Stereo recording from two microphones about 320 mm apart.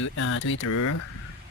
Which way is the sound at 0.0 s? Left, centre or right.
Left.